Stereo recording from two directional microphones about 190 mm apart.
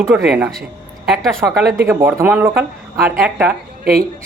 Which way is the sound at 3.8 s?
50° right (ahead or behind).